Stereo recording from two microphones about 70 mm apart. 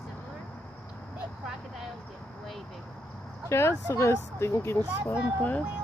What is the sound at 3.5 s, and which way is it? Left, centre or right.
Speech, left.